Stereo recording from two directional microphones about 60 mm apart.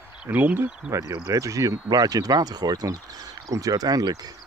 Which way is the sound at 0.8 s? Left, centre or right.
Right.